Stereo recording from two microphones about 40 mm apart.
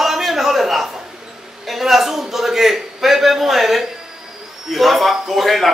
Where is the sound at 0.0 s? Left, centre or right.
Centre.